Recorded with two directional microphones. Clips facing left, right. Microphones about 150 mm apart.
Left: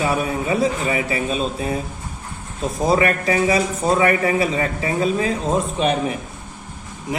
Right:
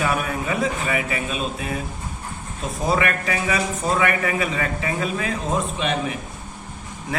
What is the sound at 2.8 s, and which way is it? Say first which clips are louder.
A man's voice: left 4 dB; 35° left (ahead or behind).